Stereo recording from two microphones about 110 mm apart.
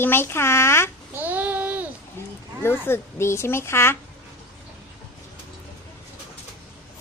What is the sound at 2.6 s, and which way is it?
A child's voice, 20° left (ahead or behind).